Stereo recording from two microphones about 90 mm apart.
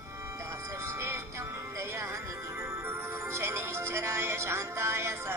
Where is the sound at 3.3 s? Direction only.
30° right (ahead or behind).